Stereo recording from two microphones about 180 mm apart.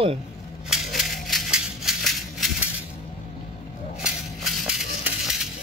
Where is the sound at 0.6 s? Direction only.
Centre (ahead or behind).